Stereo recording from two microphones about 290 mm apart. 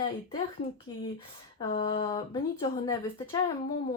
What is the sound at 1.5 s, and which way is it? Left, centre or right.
Speech, centre.